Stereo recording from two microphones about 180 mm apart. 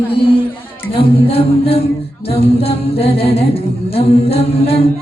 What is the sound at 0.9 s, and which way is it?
Female singing, 30° left (ahead or behind).